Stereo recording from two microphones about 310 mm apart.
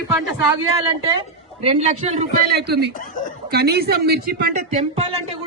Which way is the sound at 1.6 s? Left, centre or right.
Centre.